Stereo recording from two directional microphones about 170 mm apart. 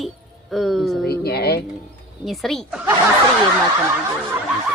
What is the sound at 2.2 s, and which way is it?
Speech, centre (ahead or behind).